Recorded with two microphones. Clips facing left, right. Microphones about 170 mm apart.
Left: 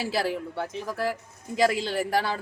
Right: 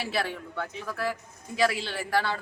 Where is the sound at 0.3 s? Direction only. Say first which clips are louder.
Left 5 dB; 30° left (ahead or behind).